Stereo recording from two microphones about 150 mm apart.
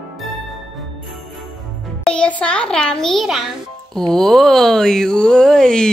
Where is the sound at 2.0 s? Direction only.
5° left (ahead or behind).